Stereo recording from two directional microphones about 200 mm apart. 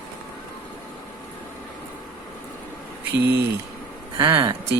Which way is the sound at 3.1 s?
55° right (ahead or behind).